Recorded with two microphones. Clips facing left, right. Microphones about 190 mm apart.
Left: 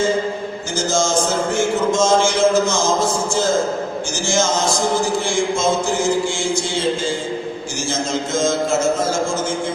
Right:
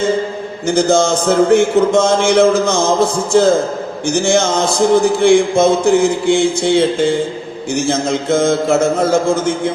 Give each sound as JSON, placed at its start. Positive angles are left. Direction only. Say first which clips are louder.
{"t": 0.7, "sound": "a man's voice", "louder": "right 7 dB", "side_deg": -60}